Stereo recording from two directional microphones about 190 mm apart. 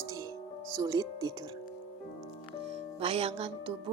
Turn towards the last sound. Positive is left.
turn(degrees=-30)  # may be behind; listen again after turning